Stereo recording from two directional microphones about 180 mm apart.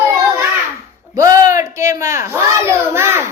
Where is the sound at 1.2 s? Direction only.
20° right (ahead or behind).